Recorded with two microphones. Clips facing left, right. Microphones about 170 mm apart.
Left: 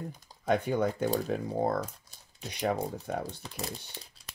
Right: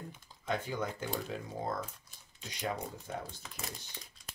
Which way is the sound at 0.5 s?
60° left (ahead or behind).